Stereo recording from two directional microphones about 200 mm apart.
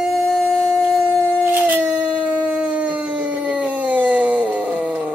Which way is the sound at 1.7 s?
5° right (ahead or behind).